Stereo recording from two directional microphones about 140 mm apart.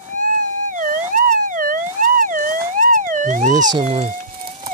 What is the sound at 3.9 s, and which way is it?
Speech, 50° right (ahead or behind).